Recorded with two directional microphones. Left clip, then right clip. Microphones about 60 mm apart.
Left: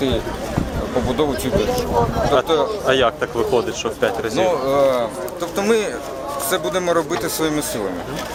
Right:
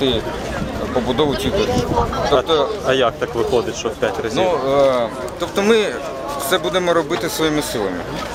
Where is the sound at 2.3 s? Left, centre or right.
Centre.